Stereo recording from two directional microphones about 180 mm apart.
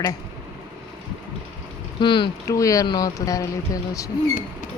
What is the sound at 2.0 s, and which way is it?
Speech, 25° left (ahead or behind).